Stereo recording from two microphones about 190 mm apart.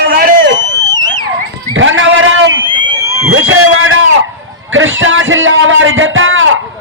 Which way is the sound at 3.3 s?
90° right.